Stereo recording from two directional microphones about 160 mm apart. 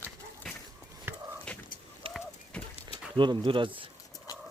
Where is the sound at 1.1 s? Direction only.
15° right (ahead or behind).